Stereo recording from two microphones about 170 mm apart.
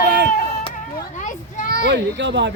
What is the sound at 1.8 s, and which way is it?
Speech, 90° right.